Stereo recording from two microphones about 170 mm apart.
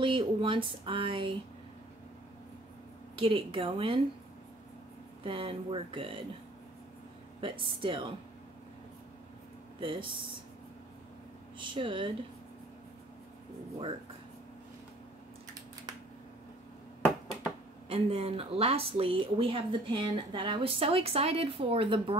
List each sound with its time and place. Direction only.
0.0 s speech: 30° right (ahead or behind)
3.2 s speech: 30° right (ahead or behind)
5.2 s speech: 30° right (ahead or behind)
7.3 s speech: 30° right (ahead or behind)
9.8 s speech: 30° right (ahead or behind)
11.5 s speech: 30° right (ahead or behind)
17.8 s speech: 35° right (ahead or behind)